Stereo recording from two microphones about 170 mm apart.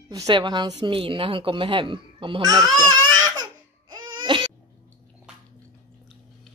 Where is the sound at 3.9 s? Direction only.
30° right (ahead or behind).